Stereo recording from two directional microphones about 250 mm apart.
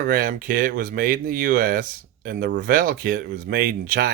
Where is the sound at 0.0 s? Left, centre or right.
Right.